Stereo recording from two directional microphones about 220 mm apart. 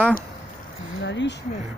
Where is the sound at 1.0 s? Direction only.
50° left (ahead or behind).